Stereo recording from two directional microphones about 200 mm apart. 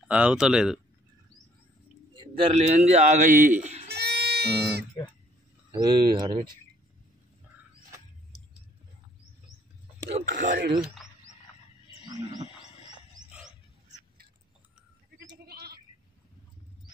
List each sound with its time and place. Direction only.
0.1 s speech: 5° right (ahead or behind)
2.3 s a man's voice: 30° right (ahead or behind)
3.9 s music: 55° right (ahead or behind)
5.7 s speech: 20° right (ahead or behind)
10.3 s speech: 45° right (ahead or behind)
13.3 s wild animals: 5° right (ahead or behind)
15.4 s goat: 50° right (ahead or behind)